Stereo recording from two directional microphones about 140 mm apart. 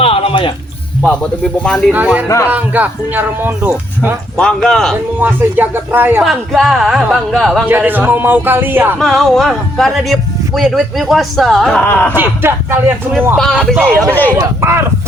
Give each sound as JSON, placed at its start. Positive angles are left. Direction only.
{"t": 0.0, "sound": "music", "side_deg": 45}
{"t": 1.6, "sound": "speech", "side_deg": 5}
{"t": 1.9, "sound": "speech", "side_deg": -10}
{"t": 2.2, "sound": "speech", "side_deg": 20}
{"t": 2.5, "sound": "speech", "side_deg": -10}
{"t": 4.4, "sound": "speech", "side_deg": 5}
{"t": 5.2, "sound": "speech", "side_deg": -15}
{"t": 6.2, "sound": "speech", "side_deg": 0}
{"t": 7.7, "sound": "speech", "side_deg": -15}
{"t": 9.0, "sound": "speech", "side_deg": 0}
{"t": 12.1, "sound": "speech", "side_deg": -15}
{"t": 13.3, "sound": "speech", "side_deg": 5}
{"t": 14.3, "sound": "speech", "side_deg": -20}